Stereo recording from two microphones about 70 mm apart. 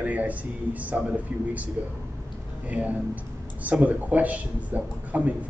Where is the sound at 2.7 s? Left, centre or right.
Right.